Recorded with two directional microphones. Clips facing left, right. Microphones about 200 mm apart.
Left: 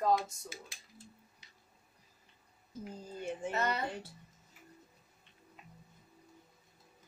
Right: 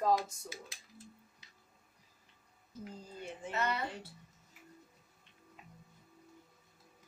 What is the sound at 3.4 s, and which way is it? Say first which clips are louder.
Speech: left 1 dB; 45° left (ahead or behind).